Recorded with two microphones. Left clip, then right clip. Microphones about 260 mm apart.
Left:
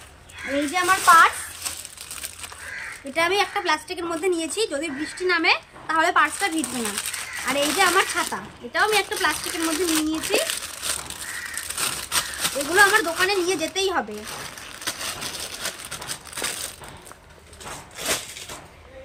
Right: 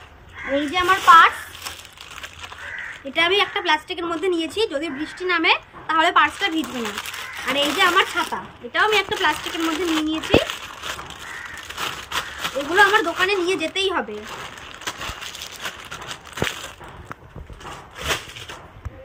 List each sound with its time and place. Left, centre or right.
0.7 s a woman's voice: centre
3.1 s a woman's voice: centre
11.8 s speech: centre
14.8 s a sound: centre